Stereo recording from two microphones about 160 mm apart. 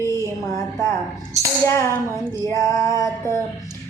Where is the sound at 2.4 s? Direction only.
20° left (ahead or behind).